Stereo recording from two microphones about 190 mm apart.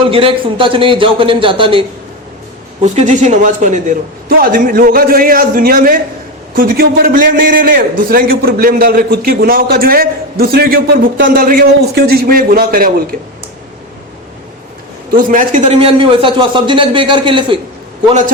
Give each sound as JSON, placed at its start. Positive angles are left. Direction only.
{"t": 0.0, "sound": "speech", "side_deg": -30}
{"t": 2.8, "sound": "a man's voice", "side_deg": -40}
{"t": 15.1, "sound": "speech", "side_deg": -45}